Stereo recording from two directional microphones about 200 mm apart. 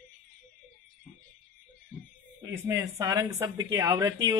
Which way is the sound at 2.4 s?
15° right (ahead or behind).